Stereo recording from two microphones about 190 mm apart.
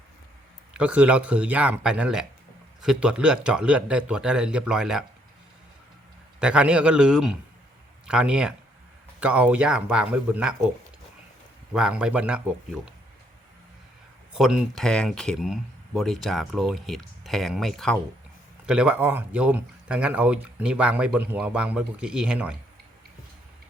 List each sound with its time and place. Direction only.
0.8 s speech: 5° right (ahead or behind)
6.4 s speech: 5° right (ahead or behind)
11.7 s speech: 5° right (ahead or behind)
14.3 s speech: centre (ahead or behind)